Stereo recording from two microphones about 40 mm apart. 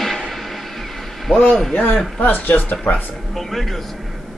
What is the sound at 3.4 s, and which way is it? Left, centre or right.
Speech, centre.